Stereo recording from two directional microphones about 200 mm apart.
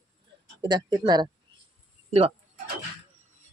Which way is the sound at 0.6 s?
20° right (ahead or behind).